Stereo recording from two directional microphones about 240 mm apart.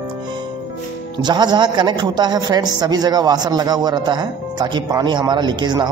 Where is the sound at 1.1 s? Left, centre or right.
Centre.